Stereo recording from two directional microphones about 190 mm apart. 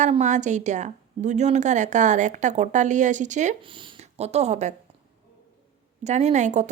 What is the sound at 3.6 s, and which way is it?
Speech, 25° right (ahead or behind).